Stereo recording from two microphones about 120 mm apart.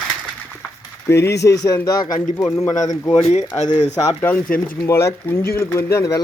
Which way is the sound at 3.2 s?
65° left (ahead or behind).